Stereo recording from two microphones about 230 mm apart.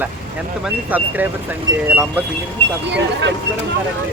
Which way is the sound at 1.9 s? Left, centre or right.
Centre.